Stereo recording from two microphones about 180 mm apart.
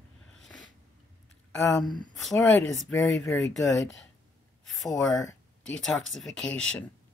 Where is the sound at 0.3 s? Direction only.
5° left (ahead or behind).